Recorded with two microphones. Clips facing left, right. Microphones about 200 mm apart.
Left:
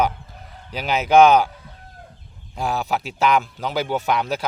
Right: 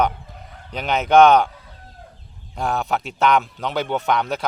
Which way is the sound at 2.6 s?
5° left (ahead or behind).